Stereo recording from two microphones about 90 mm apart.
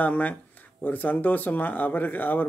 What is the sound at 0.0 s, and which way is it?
Speech, 15° left (ahead or behind).